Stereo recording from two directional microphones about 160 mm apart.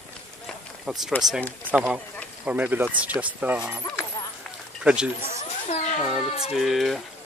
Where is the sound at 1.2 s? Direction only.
25° right (ahead or behind).